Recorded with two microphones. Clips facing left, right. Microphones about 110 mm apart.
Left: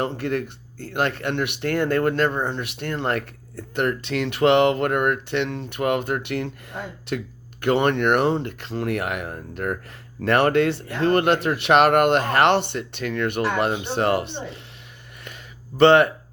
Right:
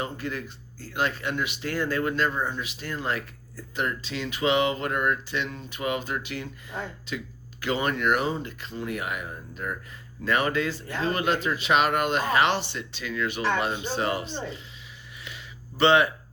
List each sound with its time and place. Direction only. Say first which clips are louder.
0.0 s speech: left 7 dB; 65° left (ahead or behind)
15.8 s speech: left 6 dB; 55° left (ahead or behind)